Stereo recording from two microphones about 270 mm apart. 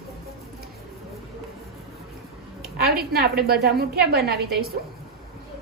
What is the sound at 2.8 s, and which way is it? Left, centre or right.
A woman's voice, right.